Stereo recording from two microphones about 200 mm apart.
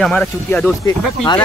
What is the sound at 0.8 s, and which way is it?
Speech, 20° left (ahead or behind).